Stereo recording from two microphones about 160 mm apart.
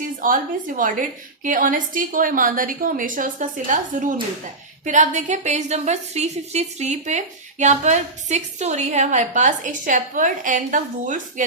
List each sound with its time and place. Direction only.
0.2 s a woman's voice: 60° right (ahead or behind)